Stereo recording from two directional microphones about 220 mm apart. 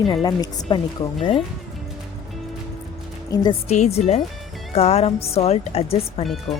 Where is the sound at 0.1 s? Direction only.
20° left (ahead or behind).